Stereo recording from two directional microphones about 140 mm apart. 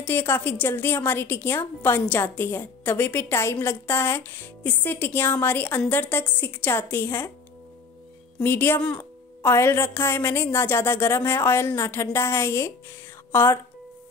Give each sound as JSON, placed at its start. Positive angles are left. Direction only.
{"t": 0.0, "sound": "a woman's voice", "side_deg": 15}
{"t": 8.4, "sound": "a woman's voice", "side_deg": 15}